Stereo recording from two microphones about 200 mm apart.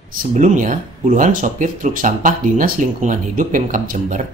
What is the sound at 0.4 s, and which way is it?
Speech, 40° right (ahead or behind).